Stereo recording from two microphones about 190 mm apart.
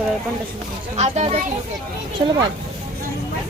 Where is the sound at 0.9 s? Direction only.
35° right (ahead or behind).